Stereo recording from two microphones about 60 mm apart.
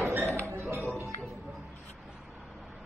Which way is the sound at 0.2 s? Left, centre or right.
Right.